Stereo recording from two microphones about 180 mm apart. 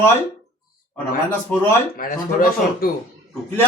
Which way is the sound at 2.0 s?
50° left (ahead or behind).